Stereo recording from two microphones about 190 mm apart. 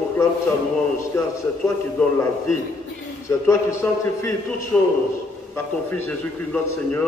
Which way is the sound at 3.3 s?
15° left (ahead or behind).